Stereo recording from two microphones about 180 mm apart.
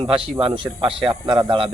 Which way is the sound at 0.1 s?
30° right (ahead or behind).